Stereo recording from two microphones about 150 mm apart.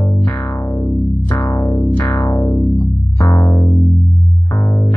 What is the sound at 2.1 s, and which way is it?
Music, 25° left (ahead or behind).